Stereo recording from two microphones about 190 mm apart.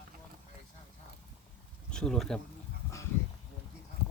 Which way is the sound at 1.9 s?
5° left (ahead or behind).